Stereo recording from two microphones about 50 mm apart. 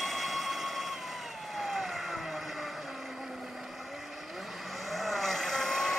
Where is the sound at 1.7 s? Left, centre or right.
Centre.